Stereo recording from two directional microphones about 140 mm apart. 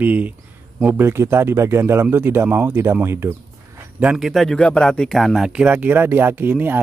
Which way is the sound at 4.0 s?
5° right (ahead or behind).